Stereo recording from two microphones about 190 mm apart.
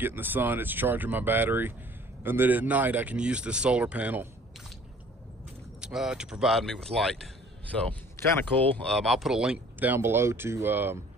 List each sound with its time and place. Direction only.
0.0 s speech: 10° right (ahead or behind)
5.8 s speech: 5° right (ahead or behind)
8.6 s speech: 5° left (ahead or behind); by 11.0 s 10° right (ahead or behind)